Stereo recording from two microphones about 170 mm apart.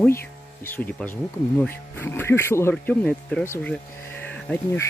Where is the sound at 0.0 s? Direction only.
15° left (ahead or behind).